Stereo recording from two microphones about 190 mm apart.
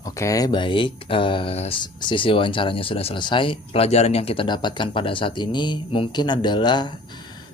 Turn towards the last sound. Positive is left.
turn(degrees=20)  # may be behind; listen again after turning